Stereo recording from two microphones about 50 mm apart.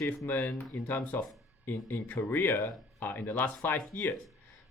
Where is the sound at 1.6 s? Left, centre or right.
Left.